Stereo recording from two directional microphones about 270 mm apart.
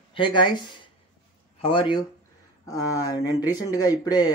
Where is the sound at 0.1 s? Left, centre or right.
Centre.